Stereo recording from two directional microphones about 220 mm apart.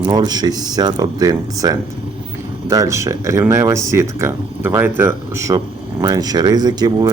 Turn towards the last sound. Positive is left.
turn(degrees=-20)  # may be behind; listen again after turning